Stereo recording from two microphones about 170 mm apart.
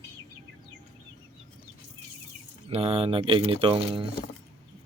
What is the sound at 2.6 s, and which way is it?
Speech, 35° right (ahead or behind).